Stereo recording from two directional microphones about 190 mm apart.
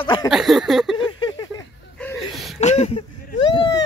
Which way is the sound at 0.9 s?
25° left (ahead or behind).